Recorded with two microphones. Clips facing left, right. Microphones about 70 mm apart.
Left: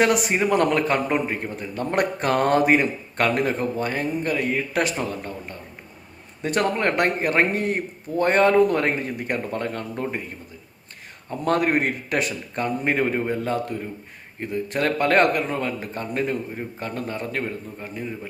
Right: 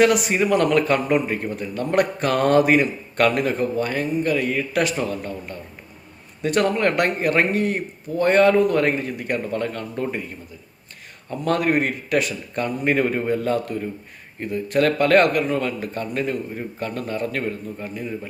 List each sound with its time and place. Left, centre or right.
0.0 s a man's voice: left
11.3 s a man's voice: left